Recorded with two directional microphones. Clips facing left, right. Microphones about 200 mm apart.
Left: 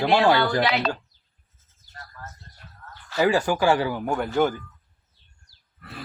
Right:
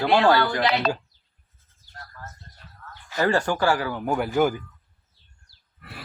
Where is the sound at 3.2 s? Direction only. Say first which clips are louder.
Left 1 dB; 5° left (ahead or behind).